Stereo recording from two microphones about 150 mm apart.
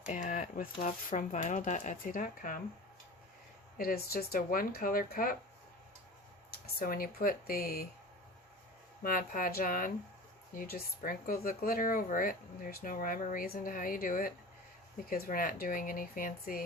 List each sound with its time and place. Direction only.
0.1 s speech: 60° left (ahead or behind)
3.8 s speech: 85° left
6.7 s speech: 75° left (ahead or behind)
9.0 s speech: 70° left (ahead or behind)
10.5 s speech: 80° left